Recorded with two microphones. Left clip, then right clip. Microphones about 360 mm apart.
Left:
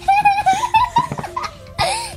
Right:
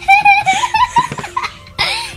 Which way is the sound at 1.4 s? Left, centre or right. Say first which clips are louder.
Right 3 dB; left.